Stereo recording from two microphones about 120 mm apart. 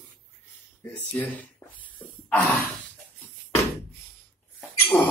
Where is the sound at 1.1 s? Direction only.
15° left (ahead or behind).